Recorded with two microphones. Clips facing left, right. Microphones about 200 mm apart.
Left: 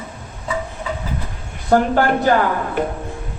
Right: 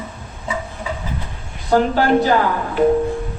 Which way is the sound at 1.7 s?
50° left (ahead or behind).